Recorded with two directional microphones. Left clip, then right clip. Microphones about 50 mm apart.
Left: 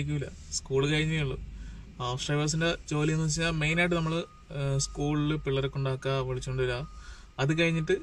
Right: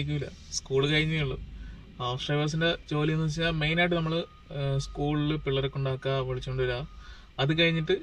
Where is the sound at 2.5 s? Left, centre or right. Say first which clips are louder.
Right 2 dB; centre.